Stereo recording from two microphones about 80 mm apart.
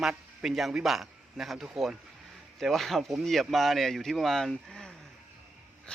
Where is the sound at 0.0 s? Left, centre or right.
Centre.